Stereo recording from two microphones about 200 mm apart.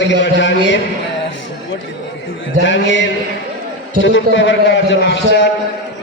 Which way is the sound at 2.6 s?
65° left (ahead or behind).